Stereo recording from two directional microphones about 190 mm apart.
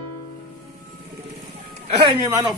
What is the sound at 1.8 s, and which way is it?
Speech, 25° right (ahead or behind).